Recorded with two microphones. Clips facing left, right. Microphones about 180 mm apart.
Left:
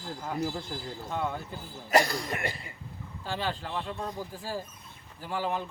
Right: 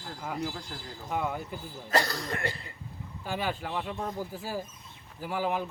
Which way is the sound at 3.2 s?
10° right (ahead or behind).